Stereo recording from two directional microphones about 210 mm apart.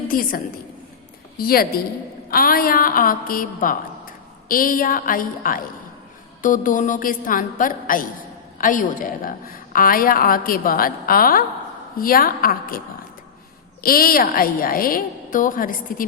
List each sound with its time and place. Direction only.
0.1 s a woman's voice: 45° left (ahead or behind)
13.8 s a woman's voice: 45° left (ahead or behind)